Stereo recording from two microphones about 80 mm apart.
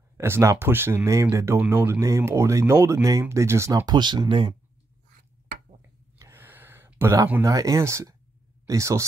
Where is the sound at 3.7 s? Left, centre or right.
Right.